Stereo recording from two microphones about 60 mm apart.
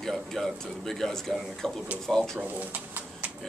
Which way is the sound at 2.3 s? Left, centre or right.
Right.